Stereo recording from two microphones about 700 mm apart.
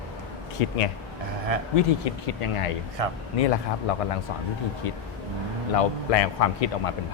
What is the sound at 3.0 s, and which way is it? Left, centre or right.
Speech, right.